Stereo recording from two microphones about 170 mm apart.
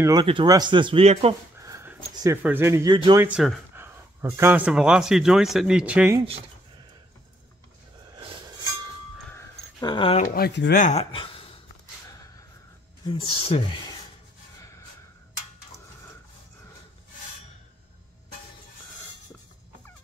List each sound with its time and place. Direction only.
0.0 s speech: 25° right (ahead or behind)
1.6 s a sound: 15° right (ahead or behind)
2.4 s speech: 15° right (ahead or behind)
3.2 s speech: 5° right (ahead or behind)
8.2 s chink: 30° right (ahead or behind)
9.3 s a sound: 15° left (ahead or behind)
9.8 s speech: 30° left (ahead or behind)
10.3 s speech: 80° left
10.8 s speech: 40° left (ahead or behind)
13.0 s speech: 30° left (ahead or behind)